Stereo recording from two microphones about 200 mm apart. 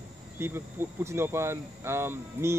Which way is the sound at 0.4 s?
10° right (ahead or behind).